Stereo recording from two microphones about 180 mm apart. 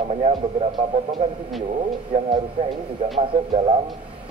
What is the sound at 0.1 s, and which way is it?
Speech, 35° right (ahead or behind).